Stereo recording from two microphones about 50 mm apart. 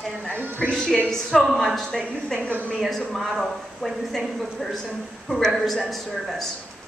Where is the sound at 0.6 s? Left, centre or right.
Centre.